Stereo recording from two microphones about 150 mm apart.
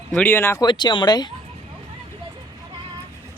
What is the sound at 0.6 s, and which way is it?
Speech, 30° left (ahead or behind).